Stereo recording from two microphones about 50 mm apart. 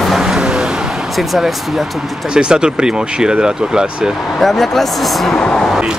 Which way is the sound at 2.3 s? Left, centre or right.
Centre.